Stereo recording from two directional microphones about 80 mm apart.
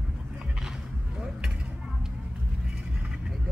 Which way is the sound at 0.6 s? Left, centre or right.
Centre.